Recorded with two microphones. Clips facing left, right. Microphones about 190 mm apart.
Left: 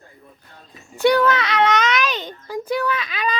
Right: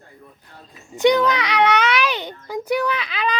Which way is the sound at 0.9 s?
20° right (ahead or behind).